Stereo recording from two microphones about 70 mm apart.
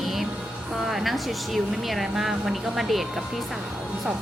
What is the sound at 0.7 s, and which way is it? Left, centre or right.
Speech, centre.